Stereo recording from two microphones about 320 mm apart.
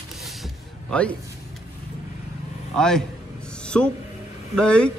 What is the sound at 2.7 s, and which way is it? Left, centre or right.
Speech, centre.